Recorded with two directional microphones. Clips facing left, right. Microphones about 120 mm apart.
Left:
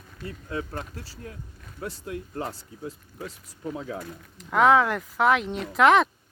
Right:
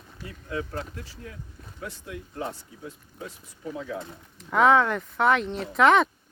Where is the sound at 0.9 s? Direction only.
35° left (ahead or behind).